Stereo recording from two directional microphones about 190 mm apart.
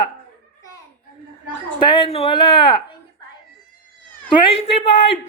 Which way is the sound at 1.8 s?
25° left (ahead or behind).